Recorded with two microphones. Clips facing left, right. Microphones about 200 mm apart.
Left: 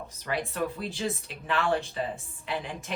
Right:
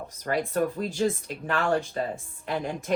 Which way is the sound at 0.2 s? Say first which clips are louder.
Right 5 dB; 45° right (ahead or behind).